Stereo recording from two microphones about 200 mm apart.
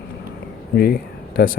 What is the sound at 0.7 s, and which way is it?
Speech, 50° left (ahead or behind).